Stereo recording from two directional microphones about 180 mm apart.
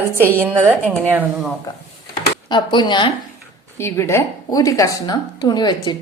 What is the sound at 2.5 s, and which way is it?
Speech, 25° left (ahead or behind).